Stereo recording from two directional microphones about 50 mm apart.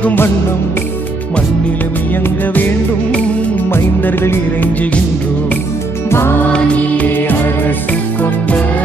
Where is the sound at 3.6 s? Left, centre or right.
Left.